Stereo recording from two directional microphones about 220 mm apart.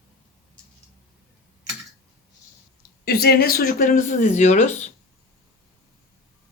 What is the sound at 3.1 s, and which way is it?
Speech, 45° left (ahead or behind).